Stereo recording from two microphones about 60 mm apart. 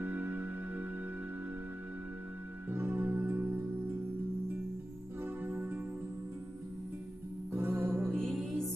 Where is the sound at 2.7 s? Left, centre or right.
Right.